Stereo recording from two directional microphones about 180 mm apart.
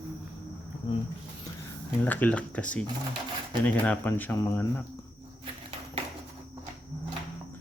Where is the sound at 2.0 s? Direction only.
10° left (ahead or behind).